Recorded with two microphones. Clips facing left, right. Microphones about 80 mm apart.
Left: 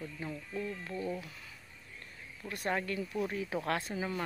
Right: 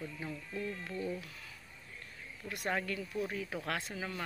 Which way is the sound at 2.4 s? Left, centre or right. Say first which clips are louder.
Left 2 dB; centre.